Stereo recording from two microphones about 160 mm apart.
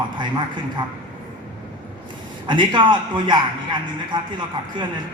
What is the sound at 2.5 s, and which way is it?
Speech, 30° right (ahead or behind).